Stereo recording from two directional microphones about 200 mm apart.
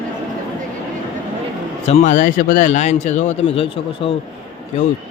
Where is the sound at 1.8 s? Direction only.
35° left (ahead or behind).